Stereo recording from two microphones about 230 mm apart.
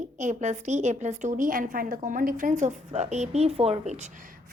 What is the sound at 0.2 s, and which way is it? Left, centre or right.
A woman's voice, right.